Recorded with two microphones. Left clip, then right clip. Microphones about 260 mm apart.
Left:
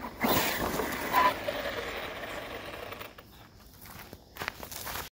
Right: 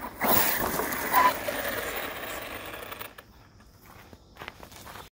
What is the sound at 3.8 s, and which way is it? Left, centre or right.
Walk, left.